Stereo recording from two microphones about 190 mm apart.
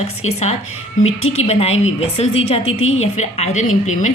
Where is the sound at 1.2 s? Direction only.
90° left.